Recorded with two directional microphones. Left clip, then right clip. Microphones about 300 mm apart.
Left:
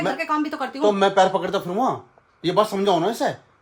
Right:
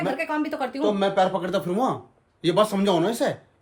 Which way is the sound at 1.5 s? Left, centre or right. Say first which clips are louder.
Left 2 dB; centre.